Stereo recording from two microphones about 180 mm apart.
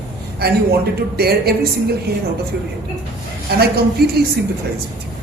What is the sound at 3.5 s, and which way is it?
Speech, 60° right (ahead or behind).